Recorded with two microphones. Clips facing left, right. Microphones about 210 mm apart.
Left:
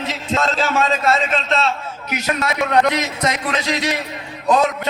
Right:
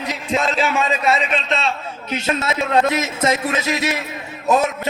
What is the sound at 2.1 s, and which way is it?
A man's voice, 25° right (ahead or behind).